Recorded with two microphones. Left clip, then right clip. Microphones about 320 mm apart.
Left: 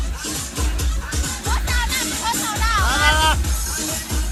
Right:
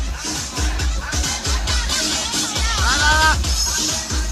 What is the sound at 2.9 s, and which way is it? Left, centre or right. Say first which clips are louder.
Music: right 3 dB; centre.